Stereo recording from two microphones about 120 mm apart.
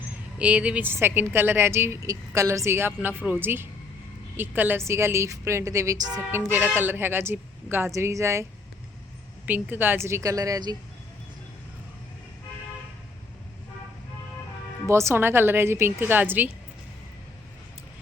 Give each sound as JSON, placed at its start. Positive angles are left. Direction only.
{"t": 0.3, "sound": "a woman's voice", "side_deg": -10}
{"t": 6.3, "sound": "a woman's voice", "side_deg": -20}
{"t": 9.5, "sound": "a woman's voice", "side_deg": -15}
{"t": 14.8, "sound": "a woman's voice", "side_deg": -25}